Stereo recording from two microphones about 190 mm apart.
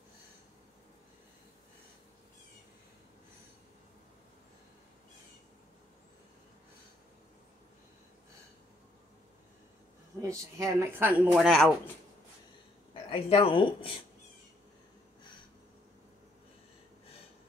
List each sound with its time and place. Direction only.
10.2 s speech: 15° right (ahead or behind); by 11.7 s centre (ahead or behind)
13.1 s speech: 30° left (ahead or behind)